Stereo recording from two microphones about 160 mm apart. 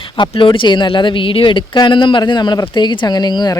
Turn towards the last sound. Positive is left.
turn(degrees=25)  # may be behind; listen again after turning